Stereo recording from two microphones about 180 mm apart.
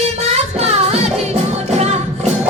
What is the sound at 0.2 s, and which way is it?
Music, 35° right (ahead or behind).